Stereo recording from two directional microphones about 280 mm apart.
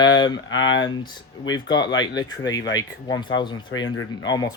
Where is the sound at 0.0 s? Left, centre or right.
Centre.